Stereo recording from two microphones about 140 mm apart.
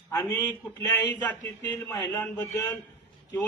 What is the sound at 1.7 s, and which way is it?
Speech, 15° left (ahead or behind).